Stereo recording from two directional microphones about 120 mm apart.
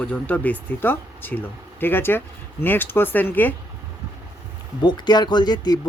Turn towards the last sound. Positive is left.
turn(degrees=35)  # may be behind; listen again after turning